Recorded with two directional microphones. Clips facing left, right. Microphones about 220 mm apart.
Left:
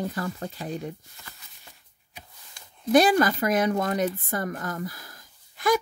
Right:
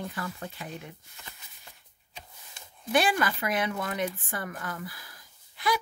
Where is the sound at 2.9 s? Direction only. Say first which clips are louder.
Left 7 dB; 40° left (ahead or behind).